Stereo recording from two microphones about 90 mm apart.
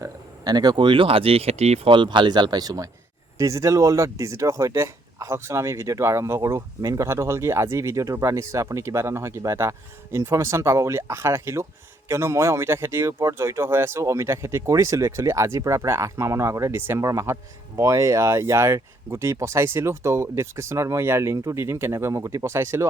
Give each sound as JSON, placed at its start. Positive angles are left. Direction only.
{"t": 0.0, "sound": "speech", "side_deg": -50}